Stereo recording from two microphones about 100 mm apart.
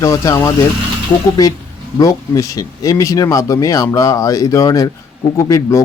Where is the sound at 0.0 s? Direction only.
35° left (ahead or behind).